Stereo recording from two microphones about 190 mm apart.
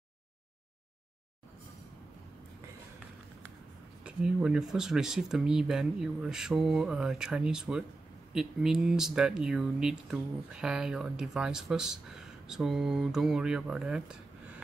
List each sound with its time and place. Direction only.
4.0 s speech: 5° right (ahead or behind)